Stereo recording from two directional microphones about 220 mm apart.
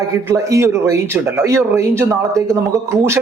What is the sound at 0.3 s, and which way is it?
A man's voice, 15° right (ahead or behind).